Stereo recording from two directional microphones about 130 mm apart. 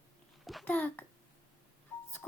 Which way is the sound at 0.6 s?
10° left (ahead or behind).